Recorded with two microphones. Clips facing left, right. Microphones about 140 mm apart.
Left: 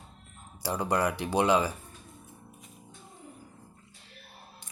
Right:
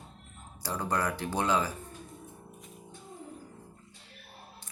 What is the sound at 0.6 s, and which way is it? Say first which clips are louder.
Speech: left 3 dB; 10° left (ahead or behind).